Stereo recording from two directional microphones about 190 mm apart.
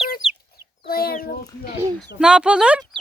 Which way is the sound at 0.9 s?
55° left (ahead or behind).